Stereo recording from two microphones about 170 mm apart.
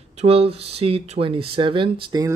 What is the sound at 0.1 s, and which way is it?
Speech, 40° right (ahead or behind).